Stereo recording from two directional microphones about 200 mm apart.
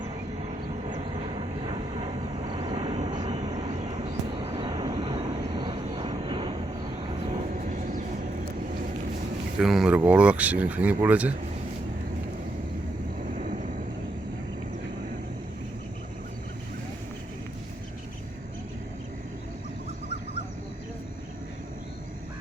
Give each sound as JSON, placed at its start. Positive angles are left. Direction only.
{"t": 1.4, "sound": "vehicle", "side_deg": -25}
{"t": 9.6, "sound": "speech", "side_deg": 0}
{"t": 13.3, "sound": "vehicle", "side_deg": -40}